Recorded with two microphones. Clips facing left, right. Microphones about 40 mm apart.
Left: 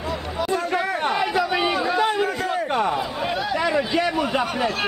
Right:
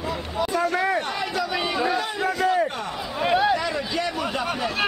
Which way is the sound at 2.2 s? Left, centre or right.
Centre.